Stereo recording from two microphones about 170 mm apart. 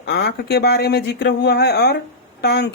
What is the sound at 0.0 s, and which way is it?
Speech, 75° left (ahead or behind).